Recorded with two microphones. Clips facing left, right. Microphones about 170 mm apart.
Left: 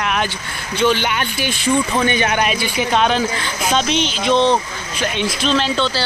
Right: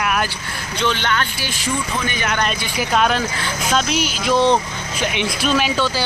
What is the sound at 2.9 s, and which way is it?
Speech, centre (ahead or behind).